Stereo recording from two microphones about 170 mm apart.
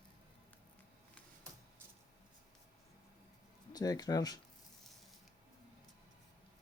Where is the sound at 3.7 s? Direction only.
20° left (ahead or behind).